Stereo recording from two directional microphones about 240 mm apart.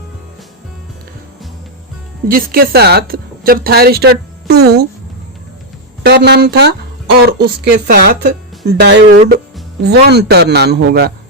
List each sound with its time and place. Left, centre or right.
2.2 s a woman's voice: right
6.0 s a woman's voice: right